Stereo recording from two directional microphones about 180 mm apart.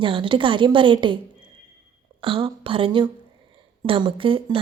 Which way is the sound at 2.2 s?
30° right (ahead or behind).